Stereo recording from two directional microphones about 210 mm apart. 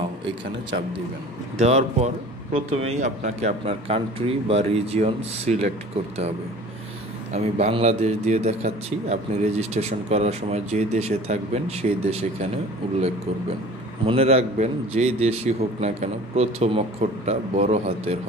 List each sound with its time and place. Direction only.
0.2 s a man's voice: 60° right (ahead or behind)
1.6 s a man's voice: 30° right (ahead or behind)
7.3 s a man's voice: 30° right (ahead or behind)
14.0 s a man's voice: 30° right (ahead or behind)